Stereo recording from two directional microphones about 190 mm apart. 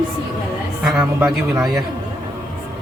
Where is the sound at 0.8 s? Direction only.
5° right (ahead or behind).